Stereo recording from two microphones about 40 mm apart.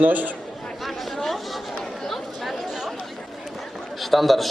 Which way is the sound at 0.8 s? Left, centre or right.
Centre.